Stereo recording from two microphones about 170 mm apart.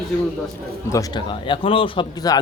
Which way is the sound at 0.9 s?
25° left (ahead or behind).